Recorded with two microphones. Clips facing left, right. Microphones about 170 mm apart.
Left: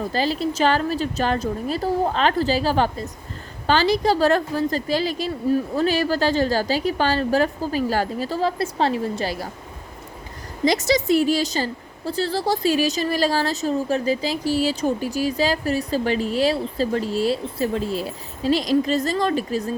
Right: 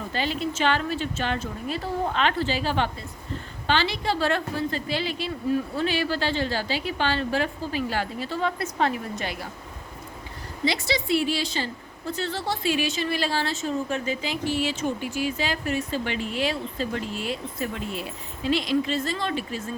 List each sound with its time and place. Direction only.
0.1 s a woman's voice: 35° left (ahead or behind)
10.7 s a woman's voice: 45° left (ahead or behind)